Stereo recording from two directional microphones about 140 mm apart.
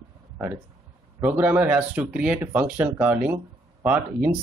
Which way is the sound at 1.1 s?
20° right (ahead or behind).